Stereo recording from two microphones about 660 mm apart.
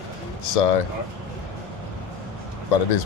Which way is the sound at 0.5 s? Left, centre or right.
Left.